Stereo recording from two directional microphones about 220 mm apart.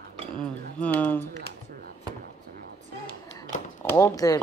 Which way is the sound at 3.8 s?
15° left (ahead or behind).